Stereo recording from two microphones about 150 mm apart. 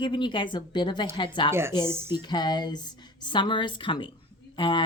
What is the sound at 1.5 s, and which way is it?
Speech, 15° right (ahead or behind).